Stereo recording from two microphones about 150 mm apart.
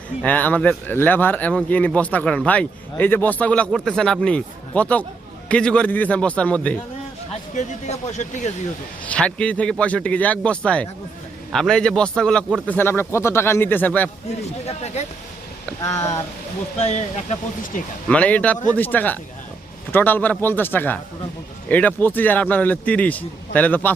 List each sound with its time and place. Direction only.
0.2 s speech: 10° left (ahead or behind)
7.5 s speech: 50° left (ahead or behind)
9.0 s speech: 5° left (ahead or behind)
14.6 s speech: 45° left (ahead or behind)
16.8 s speech: 50° left (ahead or behind)
18.1 s speech: 10° left (ahead or behind)